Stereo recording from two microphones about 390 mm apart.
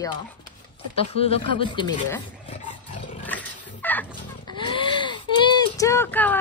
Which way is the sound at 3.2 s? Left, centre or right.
Centre.